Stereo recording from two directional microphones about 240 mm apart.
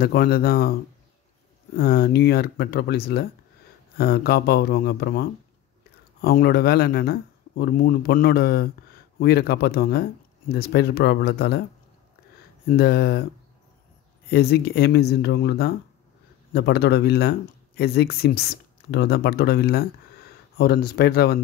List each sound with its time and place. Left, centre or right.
0.0 s speech: left
1.8 s speech: left
6.2 s speech: left
12.6 s speech: left
14.3 s speech: left